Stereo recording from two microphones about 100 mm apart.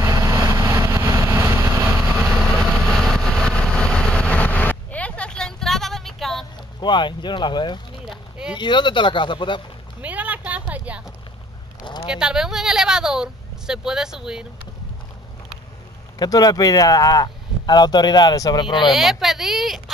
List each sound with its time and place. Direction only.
0.0 s vehicle: 30° right (ahead or behind)
2.3 s vehicle: centre (ahead or behind)
6.8 s speech: 50° left (ahead or behind)
8.0 s run: 5° right (ahead or behind)
8.5 s speech: 50° left (ahead or behind)
10.0 s a sound: 15° right (ahead or behind)
12.1 s speech: 10° right (ahead or behind)
16.2 s speech: 40° left (ahead or behind)
18.9 s speech: 5° right (ahead or behind)